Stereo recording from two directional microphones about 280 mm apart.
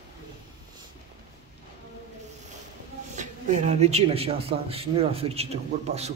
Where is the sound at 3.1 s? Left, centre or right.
Right.